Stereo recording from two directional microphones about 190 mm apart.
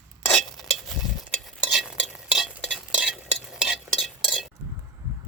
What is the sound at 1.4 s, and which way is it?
Stir, centre (ahead or behind).